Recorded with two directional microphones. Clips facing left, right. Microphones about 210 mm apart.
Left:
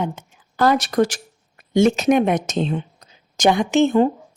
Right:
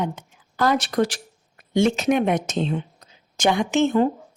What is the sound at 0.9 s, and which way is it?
A woman's voice, 45° left (ahead or behind).